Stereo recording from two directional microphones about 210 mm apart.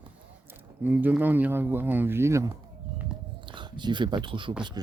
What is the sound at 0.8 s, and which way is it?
Speech, 10° right (ahead or behind).